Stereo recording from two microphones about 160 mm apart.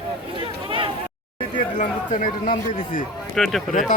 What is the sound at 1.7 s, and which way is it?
A man's voice, 55° left (ahead or behind).